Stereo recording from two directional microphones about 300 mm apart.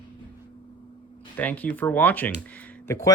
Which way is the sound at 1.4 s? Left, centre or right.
Centre.